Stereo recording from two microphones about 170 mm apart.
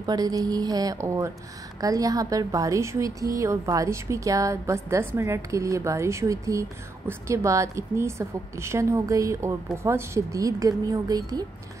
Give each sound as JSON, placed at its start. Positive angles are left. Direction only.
{"t": 0.0, "sound": "a woman's voice", "side_deg": -20}